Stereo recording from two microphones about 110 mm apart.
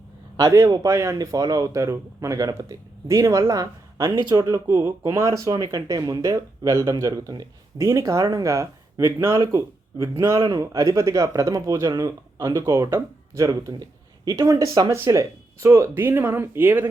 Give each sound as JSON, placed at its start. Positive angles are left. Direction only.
{"t": 0.3, "sound": "speech", "side_deg": -30}
{"t": 10.3, "sound": "speech", "side_deg": -45}
{"t": 10.6, "sound": "speech", "side_deg": -30}